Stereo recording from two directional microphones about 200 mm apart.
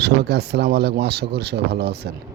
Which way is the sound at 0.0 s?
55° right (ahead or behind).